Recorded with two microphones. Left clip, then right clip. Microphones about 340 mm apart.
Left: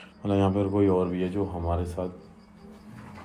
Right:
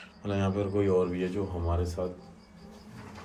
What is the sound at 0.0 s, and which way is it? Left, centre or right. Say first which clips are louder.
Speech: left 7 dB; centre.